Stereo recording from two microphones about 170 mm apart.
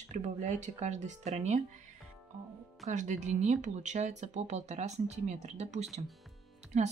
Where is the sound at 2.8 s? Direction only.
45° right (ahead or behind).